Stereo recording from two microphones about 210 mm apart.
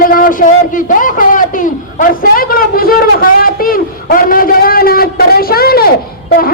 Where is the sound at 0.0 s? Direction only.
40° left (ahead or behind).